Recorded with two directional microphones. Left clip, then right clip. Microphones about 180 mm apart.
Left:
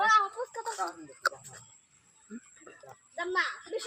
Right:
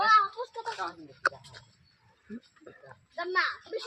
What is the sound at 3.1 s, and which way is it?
Speech, 60° left (ahead or behind).